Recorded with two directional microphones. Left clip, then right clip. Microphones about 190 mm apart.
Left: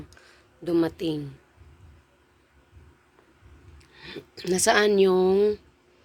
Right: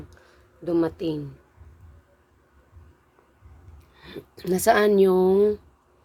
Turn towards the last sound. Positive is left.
turn(degrees=-10)  # may be behind; listen again after turning